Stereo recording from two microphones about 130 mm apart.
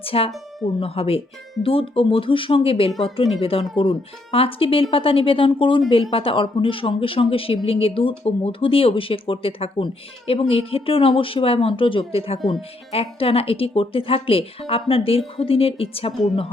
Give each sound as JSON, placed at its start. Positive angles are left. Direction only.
{"t": 0.0, "sound": "speech", "side_deg": 45}